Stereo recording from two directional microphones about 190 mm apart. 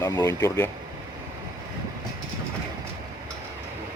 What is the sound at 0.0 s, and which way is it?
Speech, 20° left (ahead or behind).